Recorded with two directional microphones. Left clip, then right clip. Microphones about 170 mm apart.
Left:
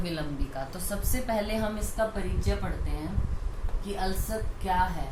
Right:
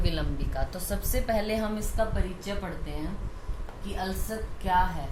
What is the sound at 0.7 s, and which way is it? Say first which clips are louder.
A woman's voice: right 2 dB; 50° right (ahead or behind).